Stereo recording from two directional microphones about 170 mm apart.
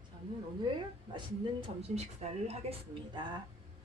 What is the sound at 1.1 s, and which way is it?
Speech, 35° right (ahead or behind).